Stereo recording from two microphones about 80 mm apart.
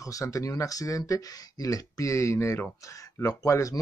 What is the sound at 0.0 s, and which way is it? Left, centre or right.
Speech, left.